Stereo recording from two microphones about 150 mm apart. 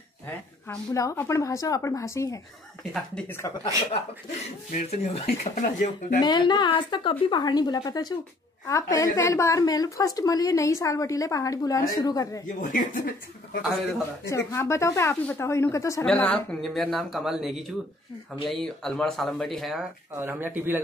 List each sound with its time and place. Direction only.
0.9 s a woman's voice: 20° left (ahead or behind)
2.8 s speech: centre (ahead or behind)
3.3 s speech: 15° left (ahead or behind)
4.6 s speech: 50° left (ahead or behind)
5.4 s speech: 60° left (ahead or behind)
6.2 s a woman's voice: 30° left (ahead or behind)
12.5 s speech: 60° left (ahead or behind); by 13.7 s 90° left
14.3 s a woman's voice: 20° left (ahead or behind)
16.1 s speech: 5° left (ahead or behind)
20.2 s speech: 15° right (ahead or behind)